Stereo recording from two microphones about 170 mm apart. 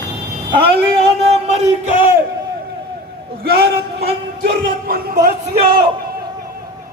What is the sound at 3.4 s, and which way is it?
A man's voice, 65° right (ahead or behind).